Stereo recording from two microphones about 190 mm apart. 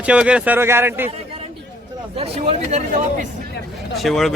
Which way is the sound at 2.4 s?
35° right (ahead or behind).